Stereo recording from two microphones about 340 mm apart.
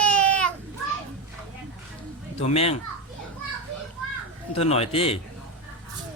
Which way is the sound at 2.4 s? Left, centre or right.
Centre.